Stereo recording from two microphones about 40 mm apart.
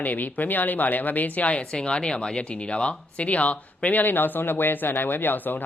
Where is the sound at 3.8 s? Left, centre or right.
Left.